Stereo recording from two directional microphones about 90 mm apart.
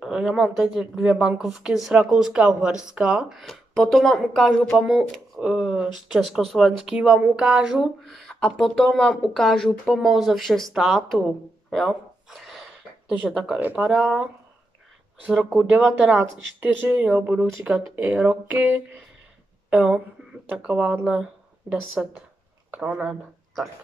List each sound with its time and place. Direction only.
0.0 s speech: 10° right (ahead or behind)
11.7 s a sound: centre (ahead or behind)
13.2 s speech: 5° right (ahead or behind)
13.6 s speech: 20° right (ahead or behind)
13.8 s speech: 5° right (ahead or behind)
15.8 s speech: 10° right (ahead or behind)
20.6 s speech: 15° right (ahead or behind)